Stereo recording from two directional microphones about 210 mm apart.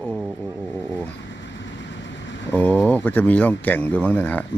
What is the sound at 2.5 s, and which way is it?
Speech, 5° left (ahead or behind).